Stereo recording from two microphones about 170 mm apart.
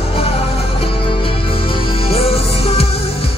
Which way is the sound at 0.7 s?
30° left (ahead or behind).